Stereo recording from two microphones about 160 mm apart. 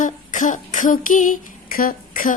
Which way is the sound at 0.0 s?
50° left (ahead or behind).